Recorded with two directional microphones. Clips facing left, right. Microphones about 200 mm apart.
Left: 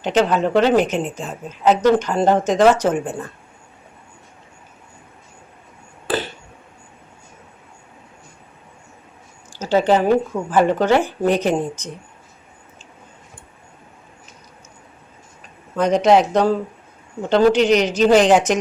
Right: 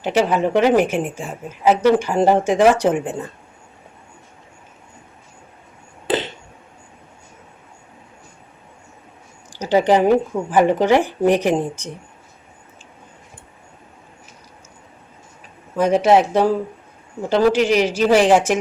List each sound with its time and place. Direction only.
0.0 s a woman's voice: 10° right (ahead or behind)
6.1 s a sound: 20° right (ahead or behind)
9.5 s a woman's voice: 15° right (ahead or behind)
15.7 s a woman's voice: 5° right (ahead or behind)